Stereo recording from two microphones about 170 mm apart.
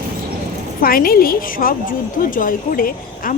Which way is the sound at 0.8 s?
60° left (ahead or behind).